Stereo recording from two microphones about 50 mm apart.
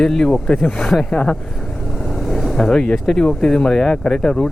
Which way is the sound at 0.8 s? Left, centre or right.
Centre.